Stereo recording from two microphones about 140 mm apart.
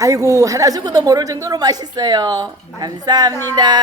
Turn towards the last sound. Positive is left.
turn(degrees=-30)  # may be behind; listen again after turning